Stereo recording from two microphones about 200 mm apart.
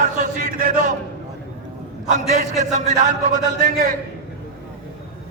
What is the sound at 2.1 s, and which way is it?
A man's voice, 35° right (ahead or behind).